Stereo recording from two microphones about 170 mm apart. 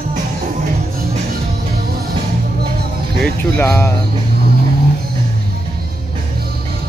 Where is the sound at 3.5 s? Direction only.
15° left (ahead or behind).